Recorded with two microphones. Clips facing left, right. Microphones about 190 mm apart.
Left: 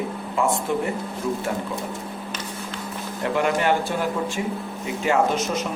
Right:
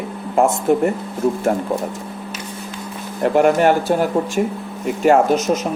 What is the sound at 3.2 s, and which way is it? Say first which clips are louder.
Speech: right 8 dB; 45° right (ahead or behind).